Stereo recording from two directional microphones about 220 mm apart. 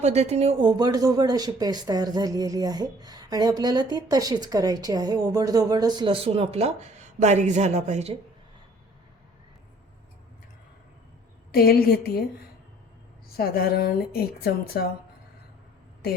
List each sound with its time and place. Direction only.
0.0 s speech: 30° right (ahead or behind)
11.5 s a woman's voice: 45° left (ahead or behind)
13.3 s a woman's voice: 45° left (ahead or behind)